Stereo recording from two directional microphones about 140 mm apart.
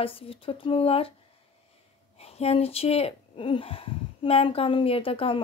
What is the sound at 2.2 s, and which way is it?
Speech, 45° left (ahead or behind).